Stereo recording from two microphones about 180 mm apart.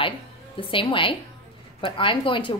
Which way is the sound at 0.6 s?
30° left (ahead or behind).